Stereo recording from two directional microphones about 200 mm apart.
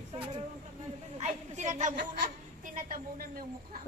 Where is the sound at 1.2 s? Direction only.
35° right (ahead or behind).